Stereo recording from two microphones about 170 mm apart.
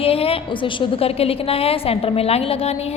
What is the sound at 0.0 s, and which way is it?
A woman's voice, 35° left (ahead or behind).